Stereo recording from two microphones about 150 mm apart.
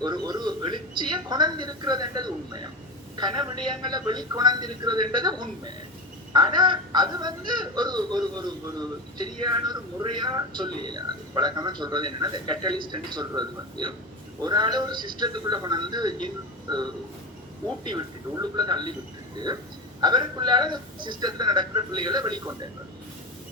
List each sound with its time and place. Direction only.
0.0 s speech: 30° right (ahead or behind)
20.0 s speech: 30° right (ahead or behind)